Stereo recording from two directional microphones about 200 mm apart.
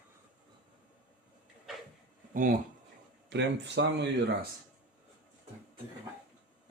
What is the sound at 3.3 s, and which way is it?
Speech, 60° right (ahead or behind).